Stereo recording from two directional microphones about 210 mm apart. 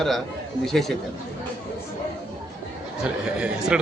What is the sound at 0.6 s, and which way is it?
Speech, centre (ahead or behind).